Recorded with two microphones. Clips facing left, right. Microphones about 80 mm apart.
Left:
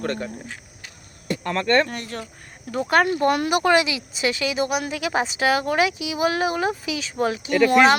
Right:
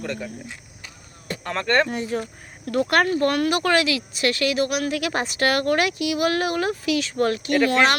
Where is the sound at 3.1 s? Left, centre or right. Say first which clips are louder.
Left 1 dB; centre.